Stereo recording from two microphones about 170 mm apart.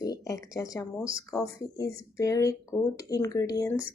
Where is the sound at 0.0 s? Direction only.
20° left (ahead or behind).